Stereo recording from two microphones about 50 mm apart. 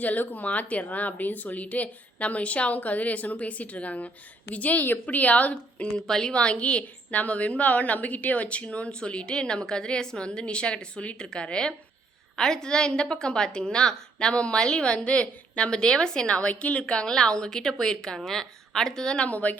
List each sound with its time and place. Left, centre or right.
0.0 s a woman's voice: left
6.0 s a woman's voice: centre
6.3 s a woman's voice: left
19.3 s a woman's voice: left